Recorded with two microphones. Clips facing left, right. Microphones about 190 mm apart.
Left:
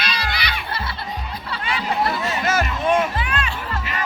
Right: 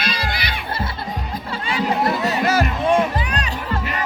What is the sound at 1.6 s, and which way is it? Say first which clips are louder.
Chatter: right 3 dB; 35° right (ahead or behind).